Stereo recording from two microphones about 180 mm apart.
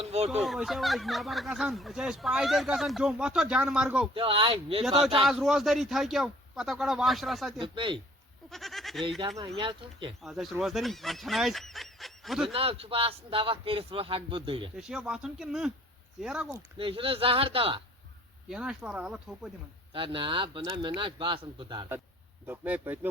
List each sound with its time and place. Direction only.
0.0 s fowl: 35° right (ahead or behind)
0.4 s speech: centre (ahead or behind)
4.1 s a man's voice: 30° right (ahead or behind)
5.2 s speech: centre (ahead or behind)
7.6 s speech: 25° right (ahead or behind)
8.4 s goat: centre (ahead or behind)
9.0 s speech: 25° right (ahead or behind)
10.2 s speech: centre (ahead or behind)
12.5 s a man's voice: 30° right (ahead or behind)
14.8 s speech: 5° right (ahead or behind)
16.7 s a man's voice: 30° right (ahead or behind)
18.4 s speech: 5° right (ahead or behind)
19.9 s speech: 30° right (ahead or behind)
22.4 s speech: 10° right (ahead or behind)